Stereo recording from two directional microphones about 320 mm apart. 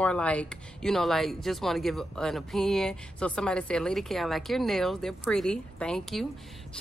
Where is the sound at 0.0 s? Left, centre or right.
Centre.